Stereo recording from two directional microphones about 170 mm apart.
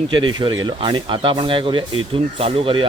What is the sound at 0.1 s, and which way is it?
Speech, 25° right (ahead or behind).